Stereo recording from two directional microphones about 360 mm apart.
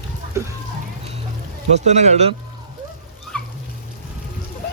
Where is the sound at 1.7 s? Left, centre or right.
Centre.